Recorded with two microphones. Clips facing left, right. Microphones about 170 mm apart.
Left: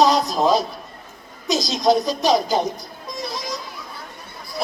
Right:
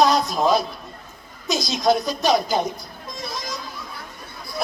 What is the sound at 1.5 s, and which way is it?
A woman's voice, 40° left (ahead or behind).